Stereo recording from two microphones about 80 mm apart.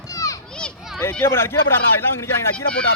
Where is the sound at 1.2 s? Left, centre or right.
Left.